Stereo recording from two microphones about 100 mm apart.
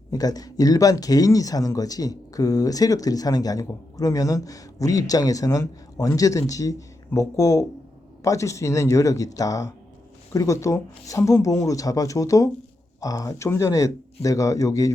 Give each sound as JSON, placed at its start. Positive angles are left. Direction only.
{"t": 0.1, "sound": "speech", "side_deg": 40}